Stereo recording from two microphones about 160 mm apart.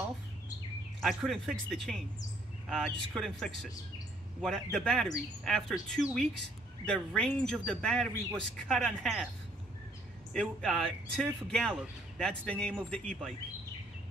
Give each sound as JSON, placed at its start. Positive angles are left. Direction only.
{"t": 1.0, "sound": "speech", "side_deg": 0}
{"t": 10.3, "sound": "a man's voice", "side_deg": 5}